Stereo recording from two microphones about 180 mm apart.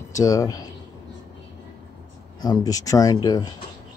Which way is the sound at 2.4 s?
20° left (ahead or behind).